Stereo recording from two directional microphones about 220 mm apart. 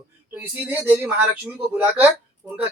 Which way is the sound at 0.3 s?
10° right (ahead or behind).